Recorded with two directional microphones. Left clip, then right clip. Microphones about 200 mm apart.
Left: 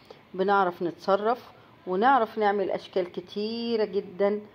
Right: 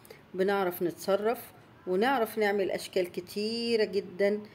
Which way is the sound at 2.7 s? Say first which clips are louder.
Left 2 dB; 55° left (ahead or behind).